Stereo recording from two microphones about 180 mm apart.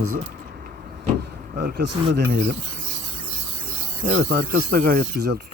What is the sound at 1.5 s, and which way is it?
Speech, 60° right (ahead or behind).